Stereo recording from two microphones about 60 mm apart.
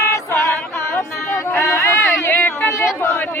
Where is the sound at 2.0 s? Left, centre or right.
Left.